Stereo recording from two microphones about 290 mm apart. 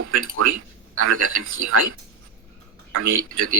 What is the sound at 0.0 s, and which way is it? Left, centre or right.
A man's voice, right.